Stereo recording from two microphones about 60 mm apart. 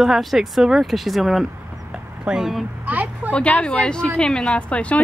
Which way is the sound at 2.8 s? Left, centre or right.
Right.